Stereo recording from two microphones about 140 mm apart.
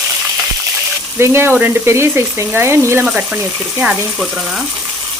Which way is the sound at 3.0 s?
10° right (ahead or behind).